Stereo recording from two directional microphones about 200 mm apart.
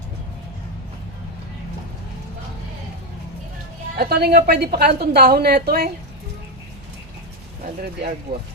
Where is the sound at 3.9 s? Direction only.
50° right (ahead or behind).